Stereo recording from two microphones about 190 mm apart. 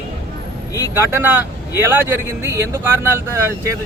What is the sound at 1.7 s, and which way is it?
Speech, 10° right (ahead or behind).